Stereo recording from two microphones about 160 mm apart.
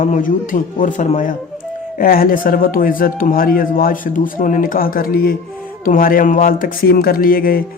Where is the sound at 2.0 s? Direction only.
65° left (ahead or behind).